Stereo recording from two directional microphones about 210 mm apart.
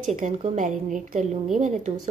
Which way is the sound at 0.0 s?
35° right (ahead or behind).